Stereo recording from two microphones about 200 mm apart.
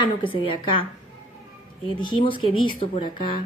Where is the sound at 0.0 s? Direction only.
25° left (ahead or behind).